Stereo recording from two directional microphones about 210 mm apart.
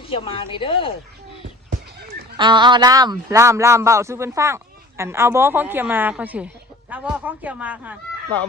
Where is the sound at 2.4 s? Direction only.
20° right (ahead or behind).